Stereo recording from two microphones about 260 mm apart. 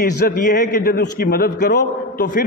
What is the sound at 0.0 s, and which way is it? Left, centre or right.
A man's voice, left.